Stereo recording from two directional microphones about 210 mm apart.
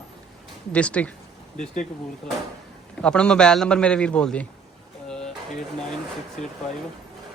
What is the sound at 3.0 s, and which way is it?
A man's voice, 5° left (ahead or behind).